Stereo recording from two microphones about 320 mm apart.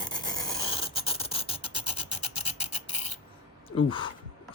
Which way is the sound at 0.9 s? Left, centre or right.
Centre.